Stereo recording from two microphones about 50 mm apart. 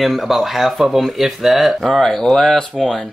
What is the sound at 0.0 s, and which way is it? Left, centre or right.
Speech, centre.